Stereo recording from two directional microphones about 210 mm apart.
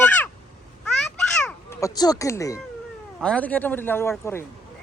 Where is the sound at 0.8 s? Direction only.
5° left (ahead or behind).